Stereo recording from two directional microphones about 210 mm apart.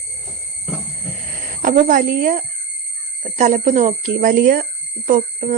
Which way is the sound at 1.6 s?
35° right (ahead or behind).